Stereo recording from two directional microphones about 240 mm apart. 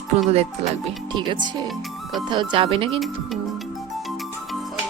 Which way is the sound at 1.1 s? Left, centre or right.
Centre.